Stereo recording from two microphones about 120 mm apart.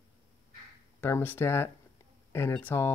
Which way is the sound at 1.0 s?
15° left (ahead or behind).